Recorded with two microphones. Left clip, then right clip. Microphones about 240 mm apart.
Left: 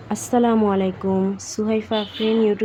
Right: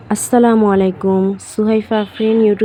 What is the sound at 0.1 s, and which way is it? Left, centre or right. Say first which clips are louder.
Speech: right 7 dB; centre.